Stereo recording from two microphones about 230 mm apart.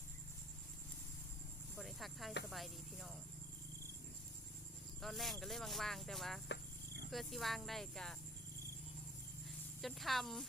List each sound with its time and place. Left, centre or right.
1.7 s cricket: centre
2.5 s speech: centre
4.9 s speech: centre
6.5 s cricket: left
7.1 s speech: centre
9.8 s speech: centre